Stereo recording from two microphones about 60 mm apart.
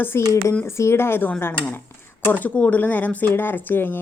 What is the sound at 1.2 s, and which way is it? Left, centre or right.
Speech, left.